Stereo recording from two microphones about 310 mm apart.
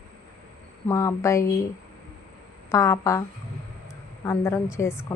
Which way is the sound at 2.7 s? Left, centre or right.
Centre.